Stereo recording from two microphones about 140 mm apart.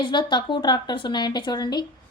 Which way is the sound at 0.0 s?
35° left (ahead or behind).